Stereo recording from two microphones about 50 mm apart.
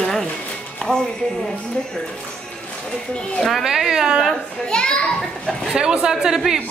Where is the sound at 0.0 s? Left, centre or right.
Centre.